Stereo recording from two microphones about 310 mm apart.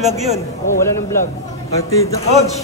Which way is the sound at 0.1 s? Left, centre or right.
Centre.